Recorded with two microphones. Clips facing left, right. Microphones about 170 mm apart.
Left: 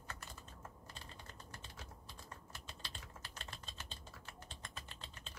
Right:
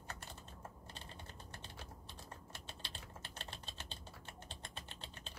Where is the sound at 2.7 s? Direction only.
30° right (ahead or behind).